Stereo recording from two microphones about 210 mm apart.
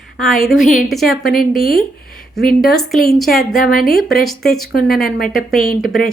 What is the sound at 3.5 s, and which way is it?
Speech, 40° left (ahead or behind).